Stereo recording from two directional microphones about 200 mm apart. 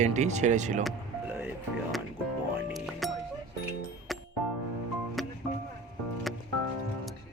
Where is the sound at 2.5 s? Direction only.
Centre (ahead or behind).